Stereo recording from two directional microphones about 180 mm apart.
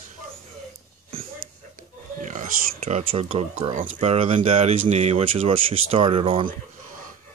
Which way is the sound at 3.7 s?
45° right (ahead or behind).